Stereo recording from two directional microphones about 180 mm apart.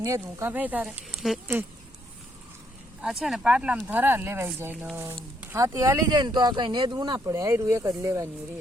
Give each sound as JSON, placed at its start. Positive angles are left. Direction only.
{"t": 0.0, "sound": "speech", "side_deg": -15}
{"t": 3.0, "sound": "speech", "side_deg": 0}